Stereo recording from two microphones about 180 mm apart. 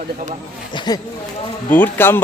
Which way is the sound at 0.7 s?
25° left (ahead or behind).